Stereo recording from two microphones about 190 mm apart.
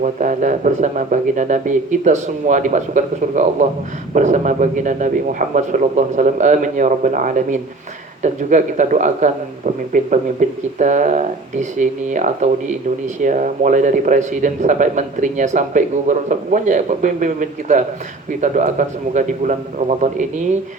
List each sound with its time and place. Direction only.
0.0 s a man's voice: 40° right (ahead or behind)